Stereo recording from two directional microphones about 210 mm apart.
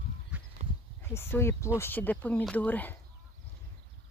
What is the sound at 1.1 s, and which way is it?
Speech, 10° left (ahead or behind).